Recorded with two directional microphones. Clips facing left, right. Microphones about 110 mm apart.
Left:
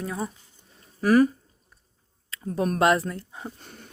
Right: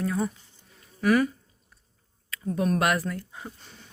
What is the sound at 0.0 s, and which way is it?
Speech, 20° left (ahead or behind).